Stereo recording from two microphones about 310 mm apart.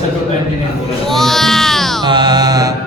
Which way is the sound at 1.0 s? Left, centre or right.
Centre.